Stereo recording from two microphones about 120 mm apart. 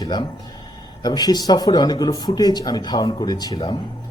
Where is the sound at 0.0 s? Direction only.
35° left (ahead or behind).